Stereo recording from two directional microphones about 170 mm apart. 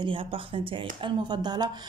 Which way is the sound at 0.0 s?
30° right (ahead or behind).